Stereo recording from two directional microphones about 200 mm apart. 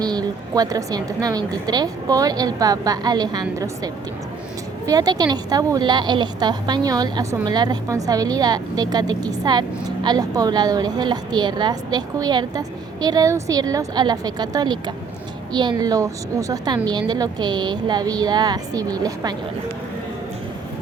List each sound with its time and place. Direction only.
0.0 s a woman's voice: 20° right (ahead or behind)
4.9 s a woman's voice: 20° right (ahead or behind)